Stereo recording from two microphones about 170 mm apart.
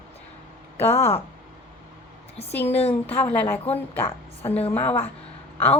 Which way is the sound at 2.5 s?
10° left (ahead or behind).